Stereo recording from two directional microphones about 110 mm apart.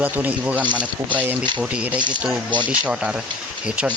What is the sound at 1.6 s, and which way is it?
Speech, 10° right (ahead or behind).